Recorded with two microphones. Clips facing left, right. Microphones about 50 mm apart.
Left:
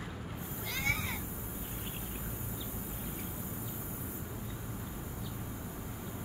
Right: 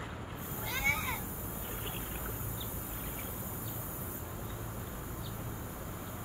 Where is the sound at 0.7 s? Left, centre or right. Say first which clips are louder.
Right 2 dB; centre.